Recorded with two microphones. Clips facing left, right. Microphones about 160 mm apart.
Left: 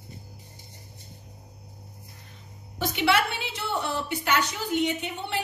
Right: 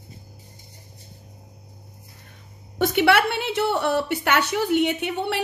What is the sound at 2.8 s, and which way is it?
A woman's voice, 55° right (ahead or behind).